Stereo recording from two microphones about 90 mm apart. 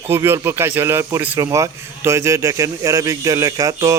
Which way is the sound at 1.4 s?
35° right (ahead or behind).